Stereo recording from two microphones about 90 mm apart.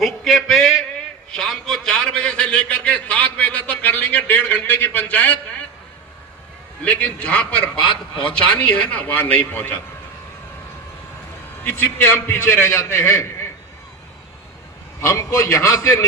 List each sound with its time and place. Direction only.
0.0 s a sound: 5° left (ahead or behind); by 5.4 s 20° left (ahead or behind)
6.8 s a man's voice: 15° left (ahead or behind)
11.6 s a man's voice: 25° left (ahead or behind)
15.0 s a man's voice: 35° left (ahead or behind)